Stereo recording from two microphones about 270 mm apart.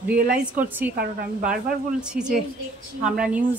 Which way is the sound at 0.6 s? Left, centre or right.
Centre.